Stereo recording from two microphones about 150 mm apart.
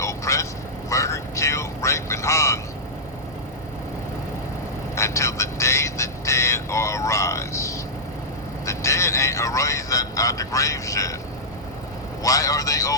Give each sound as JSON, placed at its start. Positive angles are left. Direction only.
{"t": 0.0, "sound": "vehicle", "side_deg": 20}
{"t": 4.9, "sound": "vehicle", "side_deg": 20}
{"t": 12.2, "sound": "vehicle", "side_deg": 20}